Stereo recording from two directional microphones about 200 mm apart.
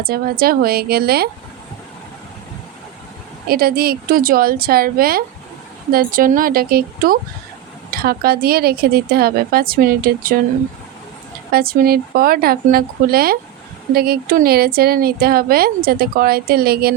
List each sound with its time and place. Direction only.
0.0 s speech: 50° right (ahead or behind)
3.5 s speech: 50° right (ahead or behind)
11.5 s speech: 50° right (ahead or behind)